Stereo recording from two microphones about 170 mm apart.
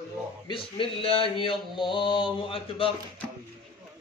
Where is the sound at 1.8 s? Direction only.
30° left (ahead or behind).